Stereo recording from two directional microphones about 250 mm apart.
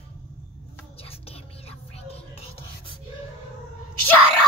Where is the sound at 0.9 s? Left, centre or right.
Left.